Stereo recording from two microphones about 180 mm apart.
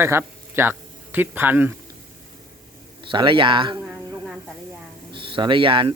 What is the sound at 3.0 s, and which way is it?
Speech, 30° right (ahead or behind).